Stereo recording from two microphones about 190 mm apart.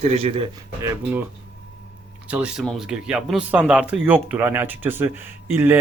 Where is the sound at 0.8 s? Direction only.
10° right (ahead or behind).